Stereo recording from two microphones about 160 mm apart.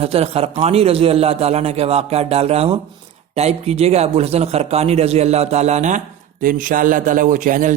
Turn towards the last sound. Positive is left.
turn(degrees=-55)  # may be behind; listen again after turning